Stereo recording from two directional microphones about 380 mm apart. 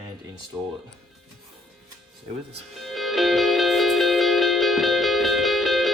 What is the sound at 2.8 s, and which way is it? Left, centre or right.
Music, centre.